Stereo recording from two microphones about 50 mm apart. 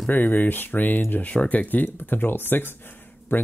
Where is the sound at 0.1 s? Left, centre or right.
Left.